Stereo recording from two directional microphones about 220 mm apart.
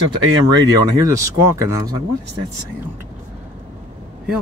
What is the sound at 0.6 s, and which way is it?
Speech, 15° right (ahead or behind).